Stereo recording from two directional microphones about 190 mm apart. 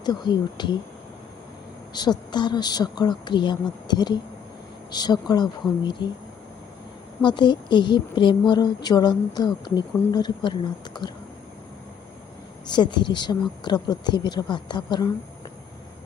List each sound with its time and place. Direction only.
0.0 s a woman's voice: 25° left (ahead or behind)
2.0 s a woman's voice: 25° left (ahead or behind)
7.2 s a woman's voice: 25° left (ahead or behind)
12.7 s a woman's voice: 25° left (ahead or behind)